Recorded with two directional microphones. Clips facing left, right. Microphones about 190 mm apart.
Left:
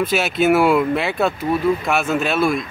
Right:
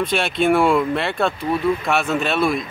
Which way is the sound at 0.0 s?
5° left (ahead or behind).